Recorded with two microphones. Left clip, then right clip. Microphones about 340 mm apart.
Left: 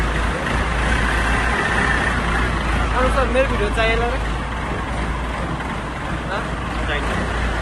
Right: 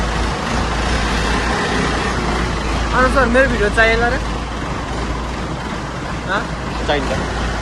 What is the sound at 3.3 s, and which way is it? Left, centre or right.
Vehicle, right.